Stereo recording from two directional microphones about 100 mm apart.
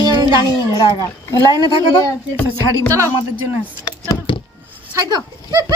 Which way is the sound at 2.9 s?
30° right (ahead or behind).